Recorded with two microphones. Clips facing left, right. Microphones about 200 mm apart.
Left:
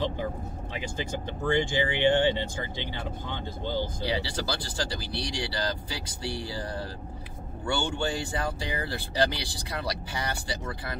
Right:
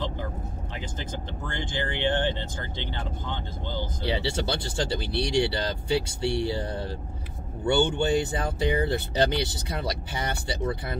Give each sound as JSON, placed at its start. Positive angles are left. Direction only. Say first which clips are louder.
{"t": 1.5, "sound": "speech", "louder": "left 6 dB", "side_deg": 15}
{"t": 4.0, "sound": "speech", "louder": "right 3 dB", "side_deg": -25}